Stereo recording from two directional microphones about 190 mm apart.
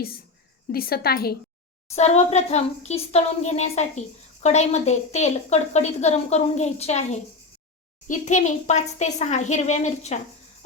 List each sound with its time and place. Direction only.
0.7 s a woman's voice: 50° left (ahead or behind)
2.0 s a woman's voice: 35° left (ahead or behind)